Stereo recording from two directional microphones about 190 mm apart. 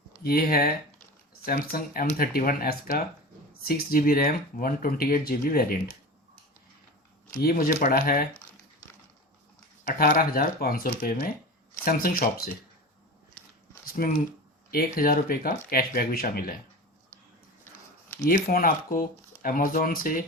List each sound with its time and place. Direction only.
0.2 s speech: 50° left (ahead or behind)
7.4 s speech: 50° left (ahead or behind)
9.8 s speech: 50° left (ahead or behind)
13.8 s a sound: 50° left (ahead or behind)
14.7 s speech: 50° left (ahead or behind)
18.3 s speech: 50° left (ahead or behind)